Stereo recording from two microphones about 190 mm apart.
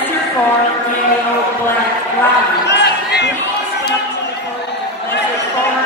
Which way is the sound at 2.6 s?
65° left (ahead or behind).